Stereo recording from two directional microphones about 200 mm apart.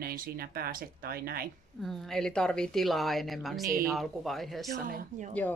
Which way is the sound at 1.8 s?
Centre (ahead or behind).